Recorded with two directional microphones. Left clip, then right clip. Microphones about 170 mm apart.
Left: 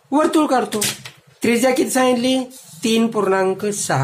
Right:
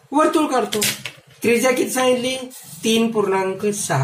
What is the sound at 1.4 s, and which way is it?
A woman's voice, 40° left (ahead or behind).